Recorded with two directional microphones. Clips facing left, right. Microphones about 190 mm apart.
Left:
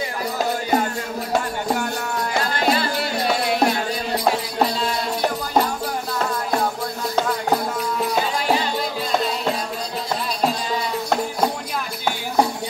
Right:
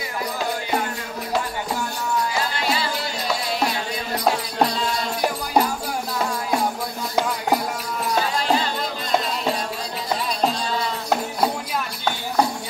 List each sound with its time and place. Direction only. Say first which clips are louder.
2.5 s music: left 4 dB; 55° left (ahead or behind)